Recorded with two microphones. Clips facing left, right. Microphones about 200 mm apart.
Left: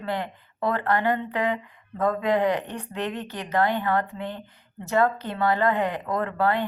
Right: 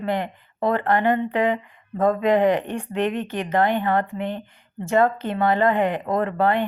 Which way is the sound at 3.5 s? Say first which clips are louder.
Right 2 dB; 20° right (ahead or behind).